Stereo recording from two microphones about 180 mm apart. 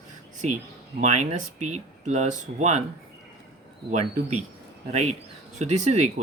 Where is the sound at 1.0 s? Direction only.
40° right (ahead or behind).